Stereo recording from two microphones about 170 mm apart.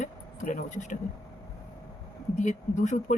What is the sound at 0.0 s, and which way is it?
Speech, 45° left (ahead or behind).